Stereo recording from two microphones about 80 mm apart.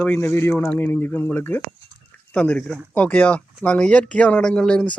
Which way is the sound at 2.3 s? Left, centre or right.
Centre.